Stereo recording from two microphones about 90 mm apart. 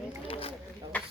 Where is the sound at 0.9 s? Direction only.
15° left (ahead or behind).